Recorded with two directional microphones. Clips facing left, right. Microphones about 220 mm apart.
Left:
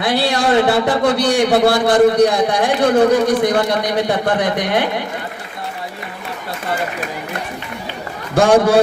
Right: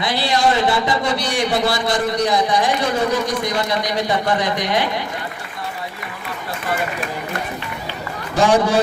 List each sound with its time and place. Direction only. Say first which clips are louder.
0.0 s a man's voice: left 2 dB; 55° left (ahead or behind)
8.4 s a man's voice: left 4 dB; 55° left (ahead or behind)